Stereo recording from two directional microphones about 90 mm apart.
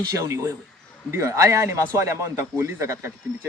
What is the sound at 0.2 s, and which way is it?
A man's voice, 30° right (ahead or behind).